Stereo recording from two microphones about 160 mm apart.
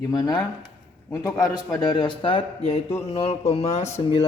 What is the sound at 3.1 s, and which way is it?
A man's voice, 40° left (ahead or behind).